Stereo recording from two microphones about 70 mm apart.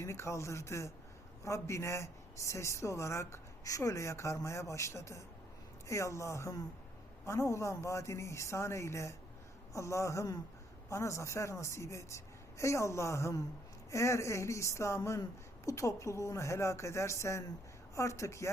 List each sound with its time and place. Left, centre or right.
0.0 s a man's voice: left